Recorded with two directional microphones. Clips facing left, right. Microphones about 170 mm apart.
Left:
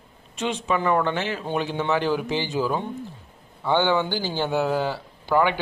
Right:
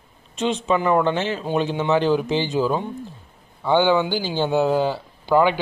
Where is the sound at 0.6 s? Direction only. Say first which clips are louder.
Right 3 dB; 20° right (ahead or behind).